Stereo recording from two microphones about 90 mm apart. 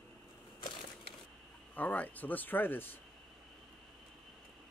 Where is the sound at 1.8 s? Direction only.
20° left (ahead or behind).